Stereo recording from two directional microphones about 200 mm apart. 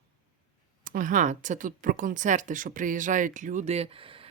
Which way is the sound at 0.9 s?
40° right (ahead or behind).